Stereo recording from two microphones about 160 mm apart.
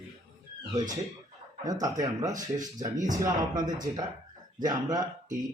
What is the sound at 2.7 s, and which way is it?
Speech, 25° right (ahead or behind).